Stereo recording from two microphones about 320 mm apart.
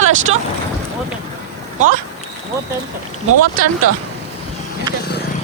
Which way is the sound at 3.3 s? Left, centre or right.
Right.